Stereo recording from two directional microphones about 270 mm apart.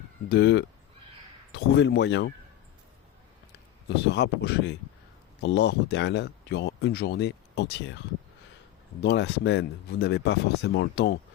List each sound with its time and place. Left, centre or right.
0.3 s speech: left
3.8 s speech: left
9.0 s speech: left